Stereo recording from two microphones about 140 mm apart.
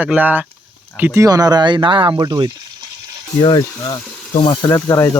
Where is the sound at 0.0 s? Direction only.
10° right (ahead or behind); by 2.5 s 30° right (ahead or behind).